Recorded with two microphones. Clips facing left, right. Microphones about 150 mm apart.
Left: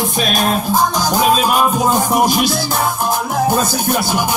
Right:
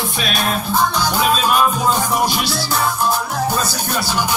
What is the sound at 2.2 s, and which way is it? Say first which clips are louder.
Music: left 5 dB; 45° left (ahead or behind).